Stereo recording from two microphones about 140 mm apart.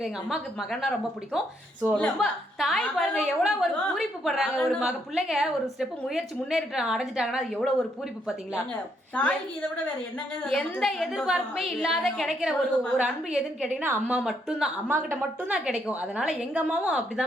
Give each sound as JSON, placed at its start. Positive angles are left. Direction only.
{"t": 0.0, "sound": "a woman's voice", "side_deg": 0}
{"t": 9.1, "sound": "a woman's voice", "side_deg": 10}
{"t": 14.2, "sound": "a woman's voice", "side_deg": -5}
{"t": 14.8, "sound": "a woman's voice", "side_deg": -15}
{"t": 15.5, "sound": "a woman's voice", "side_deg": -5}